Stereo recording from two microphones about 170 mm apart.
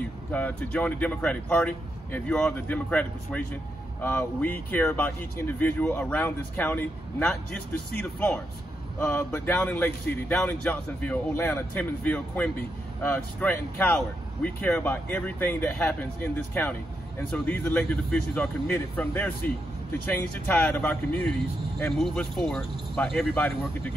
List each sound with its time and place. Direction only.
0.3 s speech: 10° left (ahead or behind)